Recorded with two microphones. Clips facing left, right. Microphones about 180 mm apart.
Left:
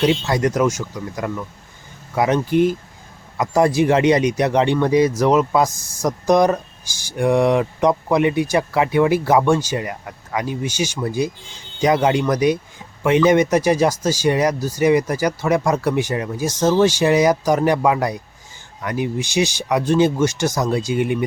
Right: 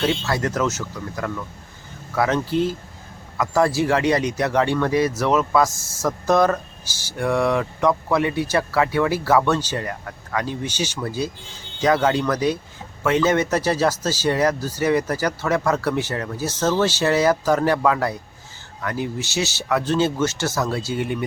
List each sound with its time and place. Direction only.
0.0 s speech: 20° left (ahead or behind)